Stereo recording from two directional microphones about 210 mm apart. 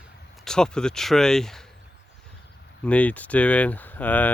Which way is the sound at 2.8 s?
5° left (ahead or behind).